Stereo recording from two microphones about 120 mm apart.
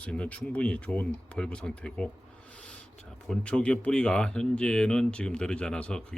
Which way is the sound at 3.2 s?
5° left (ahead or behind).